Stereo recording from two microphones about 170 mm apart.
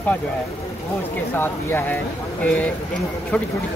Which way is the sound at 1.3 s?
10° left (ahead or behind).